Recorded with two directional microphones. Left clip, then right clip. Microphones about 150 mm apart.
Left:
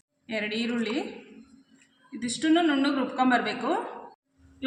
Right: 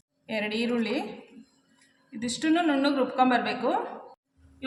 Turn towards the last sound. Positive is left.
turn(degrees=-45)  # may be behind; listen again after turning